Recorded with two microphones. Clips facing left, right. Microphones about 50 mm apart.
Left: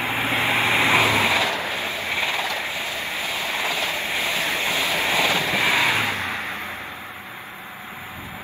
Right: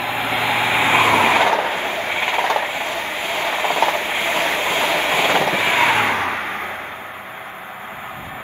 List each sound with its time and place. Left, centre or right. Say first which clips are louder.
0.0 s vehicle: right 2 dB; centre
0.9 s vehicle: right 5 dB; right